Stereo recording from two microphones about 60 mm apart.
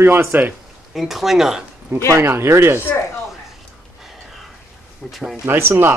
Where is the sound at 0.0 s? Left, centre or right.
Right.